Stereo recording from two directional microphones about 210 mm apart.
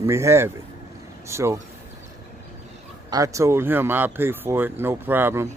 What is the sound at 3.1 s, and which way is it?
Speech, 15° right (ahead or behind).